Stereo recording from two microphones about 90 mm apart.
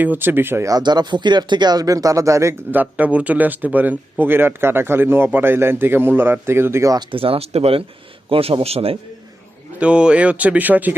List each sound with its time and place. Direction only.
0.0 s a man's voice: 20° right (ahead or behind)
0.7 s speech: 55° right (ahead or behind); by 2.6 s 35° right (ahead or behind)
2.7 s a man's voice: 15° right (ahead or behind)
7.1 s speech: 90° right
9.8 s speech: 10° right (ahead or behind)